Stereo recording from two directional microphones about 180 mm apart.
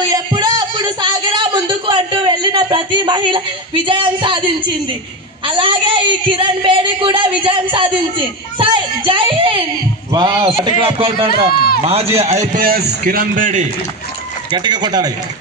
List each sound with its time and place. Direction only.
0.1 s music: 20° right (ahead or behind)
5.5 s speech: 30° right (ahead or behind)
11.5 s a man's voice: 60° left (ahead or behind)
11.8 s a man's voice: 35° right (ahead or behind)
14.5 s speech: 25° right (ahead or behind)